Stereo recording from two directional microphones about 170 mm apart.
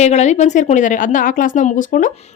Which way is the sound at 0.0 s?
40° left (ahead or behind).